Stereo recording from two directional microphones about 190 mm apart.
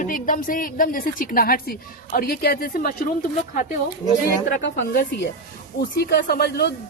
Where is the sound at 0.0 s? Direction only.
45° left (ahead or behind).